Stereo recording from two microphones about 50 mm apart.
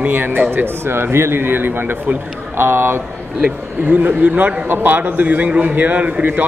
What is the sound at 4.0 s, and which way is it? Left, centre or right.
Speech, right.